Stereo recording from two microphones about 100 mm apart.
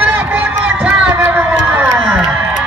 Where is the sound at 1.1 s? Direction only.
20° right (ahead or behind).